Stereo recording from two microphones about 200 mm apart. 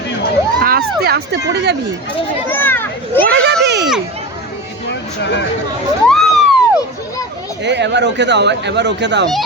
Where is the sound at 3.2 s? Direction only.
55° right (ahead or behind).